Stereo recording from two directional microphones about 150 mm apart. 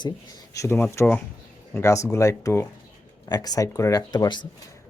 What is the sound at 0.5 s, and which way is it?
Speech, 20° left (ahead or behind).